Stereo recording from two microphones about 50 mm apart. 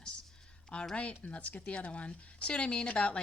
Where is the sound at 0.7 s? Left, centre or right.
Left.